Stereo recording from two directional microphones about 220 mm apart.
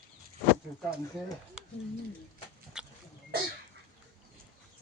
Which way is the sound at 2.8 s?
5° right (ahead or behind).